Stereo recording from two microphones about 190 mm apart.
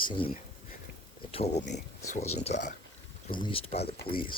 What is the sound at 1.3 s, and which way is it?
Speech, 30° left (ahead or behind).